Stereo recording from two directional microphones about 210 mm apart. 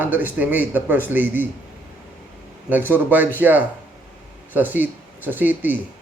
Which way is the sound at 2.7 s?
10° right (ahead or behind).